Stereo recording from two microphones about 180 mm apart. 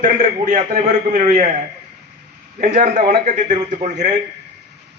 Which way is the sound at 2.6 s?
50° right (ahead or behind).